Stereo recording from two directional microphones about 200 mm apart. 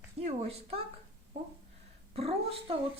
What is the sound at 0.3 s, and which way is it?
Speech, 30° right (ahead or behind).